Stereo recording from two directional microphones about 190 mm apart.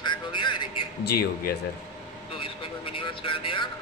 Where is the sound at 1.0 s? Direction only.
55° left (ahead or behind).